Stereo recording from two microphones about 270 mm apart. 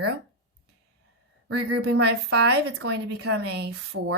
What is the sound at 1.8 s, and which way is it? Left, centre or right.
Speech, right.